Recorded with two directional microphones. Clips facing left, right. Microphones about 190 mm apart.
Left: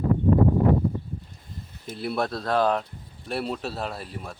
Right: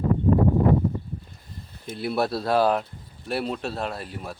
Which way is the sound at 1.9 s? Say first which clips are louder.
Right 2 dB; centre (ahead or behind).